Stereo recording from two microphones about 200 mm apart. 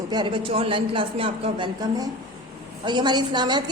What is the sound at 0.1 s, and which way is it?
A woman's voice, 25° right (ahead or behind).